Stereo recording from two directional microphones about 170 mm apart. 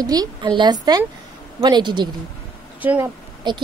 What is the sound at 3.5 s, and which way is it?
Speech, 25° right (ahead or behind).